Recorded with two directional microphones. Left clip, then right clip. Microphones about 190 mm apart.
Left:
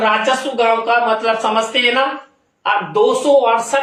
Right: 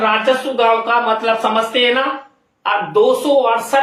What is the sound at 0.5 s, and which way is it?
Speech, 20° right (ahead or behind).